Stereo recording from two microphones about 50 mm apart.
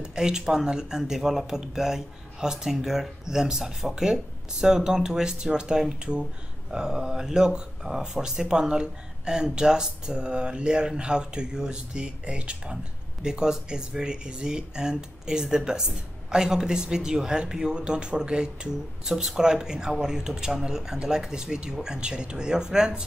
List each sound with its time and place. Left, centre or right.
0.0 s speech: centre